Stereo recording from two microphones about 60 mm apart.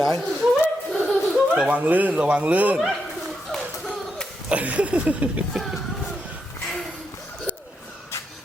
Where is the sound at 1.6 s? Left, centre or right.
Right.